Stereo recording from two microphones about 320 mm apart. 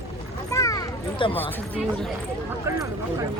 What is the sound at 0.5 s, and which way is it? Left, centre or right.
Speech, centre.